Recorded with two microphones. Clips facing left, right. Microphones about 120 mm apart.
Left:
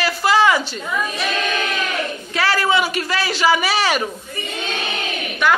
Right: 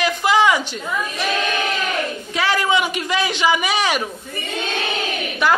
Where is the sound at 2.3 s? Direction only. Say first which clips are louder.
Left 1 dB; 15° right (ahead or behind).